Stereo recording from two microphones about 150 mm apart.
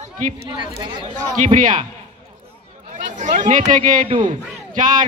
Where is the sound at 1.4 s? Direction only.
60° right (ahead or behind).